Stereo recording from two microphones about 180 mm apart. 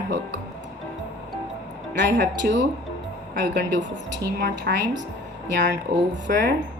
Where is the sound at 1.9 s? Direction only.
80° right.